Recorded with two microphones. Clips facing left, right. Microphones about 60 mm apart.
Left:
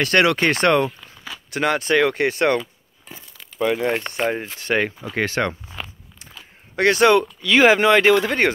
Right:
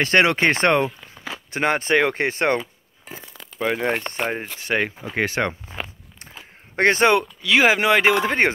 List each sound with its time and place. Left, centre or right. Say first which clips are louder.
0.0 s speech: even; right
4.3 s speech: left 2 dB; centre
4.9 s speech: left 1 dB; right
6.8 s speech: left 1 dB; right
7.4 s speech: left 3 dB; centre
8.1 s speech: left 2 dB; right